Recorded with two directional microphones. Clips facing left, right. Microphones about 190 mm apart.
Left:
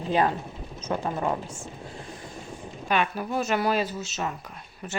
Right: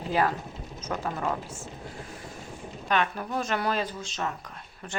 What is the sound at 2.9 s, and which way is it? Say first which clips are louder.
Speech: left 2 dB; 10° left (ahead or behind).